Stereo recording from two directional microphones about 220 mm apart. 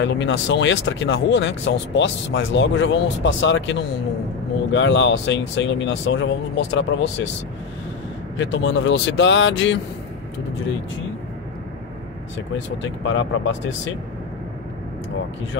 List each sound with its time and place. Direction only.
0.0 s speech: 55° left (ahead or behind)
4.7 s speech: 55° left (ahead or behind)
8.4 s speech: 60° left (ahead or behind)
12.5 s speech: 55° left (ahead or behind)